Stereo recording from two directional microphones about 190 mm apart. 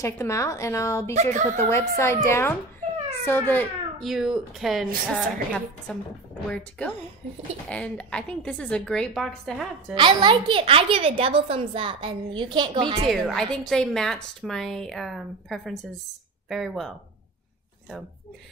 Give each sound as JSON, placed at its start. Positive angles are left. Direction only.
{"t": 0.0, "sound": "a woman's voice", "side_deg": 15}
{"t": 4.1, "sound": "a woman's voice", "side_deg": 0}
{"t": 9.9, "sound": "a woman's voice", "side_deg": -25}
{"t": 13.1, "sound": "a woman's voice", "side_deg": 0}